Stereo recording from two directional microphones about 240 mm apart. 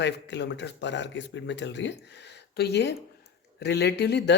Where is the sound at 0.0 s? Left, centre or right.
Left.